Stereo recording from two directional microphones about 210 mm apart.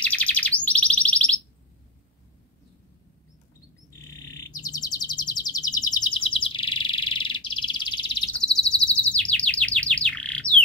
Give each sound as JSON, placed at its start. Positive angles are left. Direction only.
{"t": 0.0, "sound": "bird", "side_deg": 5}
{"t": 4.2, "sound": "chirp", "side_deg": 15}
{"t": 8.4, "sound": "chirp", "side_deg": 5}